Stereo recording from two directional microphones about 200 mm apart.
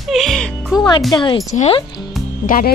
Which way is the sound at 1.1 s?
20° left (ahead or behind).